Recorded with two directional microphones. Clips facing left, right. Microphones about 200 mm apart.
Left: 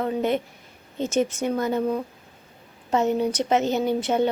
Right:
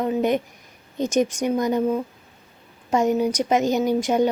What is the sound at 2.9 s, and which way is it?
Speech, 10° right (ahead or behind).